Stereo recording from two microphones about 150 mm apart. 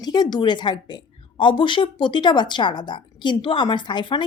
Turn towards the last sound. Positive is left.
turn(degrees=30)  # may be behind; listen again after turning